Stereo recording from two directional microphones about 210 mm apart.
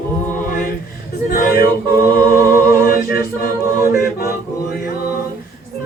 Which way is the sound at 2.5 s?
45° left (ahead or behind).